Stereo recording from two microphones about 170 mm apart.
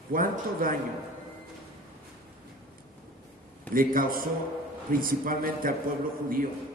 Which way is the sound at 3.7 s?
55° right (ahead or behind).